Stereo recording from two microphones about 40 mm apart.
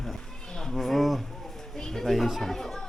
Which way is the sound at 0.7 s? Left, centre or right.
Centre.